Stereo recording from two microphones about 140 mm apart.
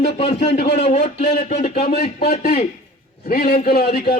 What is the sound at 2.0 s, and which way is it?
A man's voice, 90° left.